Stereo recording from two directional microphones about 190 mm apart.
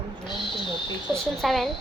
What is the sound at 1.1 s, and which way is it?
Speech, centre (ahead or behind).